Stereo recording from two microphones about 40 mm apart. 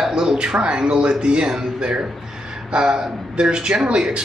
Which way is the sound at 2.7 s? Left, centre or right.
Centre.